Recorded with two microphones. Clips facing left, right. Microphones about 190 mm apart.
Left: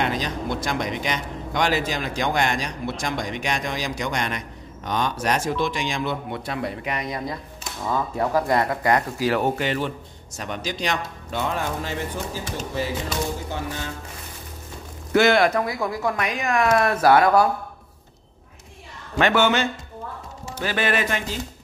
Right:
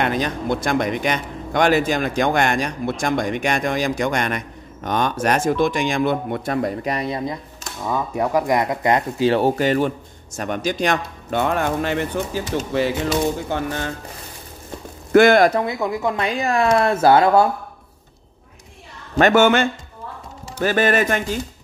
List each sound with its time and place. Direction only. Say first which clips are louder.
0.0 s speech: right 4 dB; 55° right (ahead or behind); by 7.3 s 25° right (ahead or behind)
7.9 s speech: right 2 dB; 15° right (ahead or behind)
9.6 s speech: right 7 dB; 45° right (ahead or behind); by 13.7 s 60° right (ahead or behind)
15.1 s speech: right 5 dB; 50° right (ahead or behind)
15.5 s speech: right 3 dB; 25° right (ahead or behind)
19.1 s speech: right 5 dB; 45° right (ahead or behind)